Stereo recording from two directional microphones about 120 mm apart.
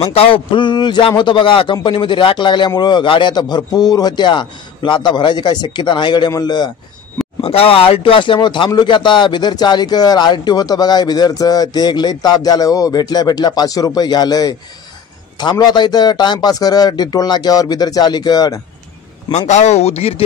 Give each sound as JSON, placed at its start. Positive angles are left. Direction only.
{"t": 0.0, "sound": "a man's voice", "side_deg": 55}
{"t": 7.4, "sound": "a man's voice", "side_deg": 50}
{"t": 15.6, "sound": "a man's voice", "side_deg": 35}
{"t": 19.3, "sound": "speech", "side_deg": 75}